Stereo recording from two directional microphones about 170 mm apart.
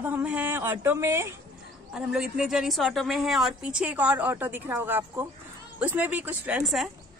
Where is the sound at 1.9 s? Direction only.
5° right (ahead or behind).